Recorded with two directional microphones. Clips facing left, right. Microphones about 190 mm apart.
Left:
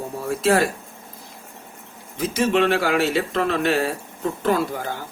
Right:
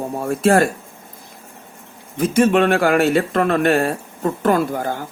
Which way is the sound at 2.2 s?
55° right (ahead or behind).